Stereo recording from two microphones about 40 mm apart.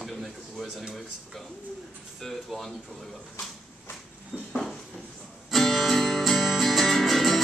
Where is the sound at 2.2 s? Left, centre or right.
Centre.